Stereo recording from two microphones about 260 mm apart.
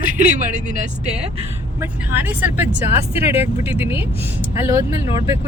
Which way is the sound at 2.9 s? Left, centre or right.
Left.